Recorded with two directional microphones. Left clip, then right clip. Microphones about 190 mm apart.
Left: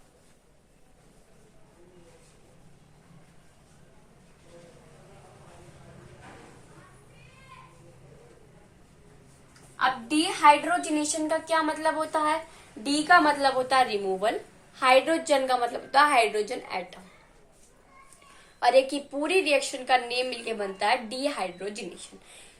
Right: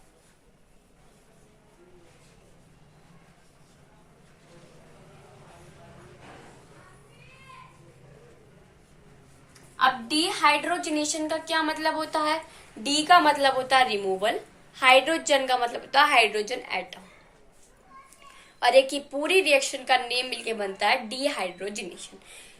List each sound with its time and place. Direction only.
9.8 s a sound: 20° left (ahead or behind)
10.7 s a woman's voice: 35° left (ahead or behind)
12.8 s a woman's voice: 10° left (ahead or behind)
18.6 s a woman's voice: 5° left (ahead or behind)